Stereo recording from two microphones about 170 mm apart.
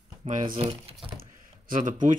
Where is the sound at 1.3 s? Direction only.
50° right (ahead or behind).